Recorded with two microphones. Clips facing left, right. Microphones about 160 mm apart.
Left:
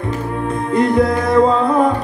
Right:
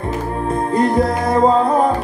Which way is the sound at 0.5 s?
35° right (ahead or behind).